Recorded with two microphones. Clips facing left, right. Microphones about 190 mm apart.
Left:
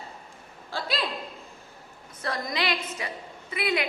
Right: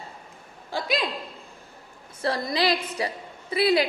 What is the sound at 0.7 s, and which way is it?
Speech, 15° right (ahead or behind).